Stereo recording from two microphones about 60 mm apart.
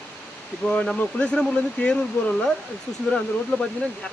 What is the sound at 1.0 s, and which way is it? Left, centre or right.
Speech, left.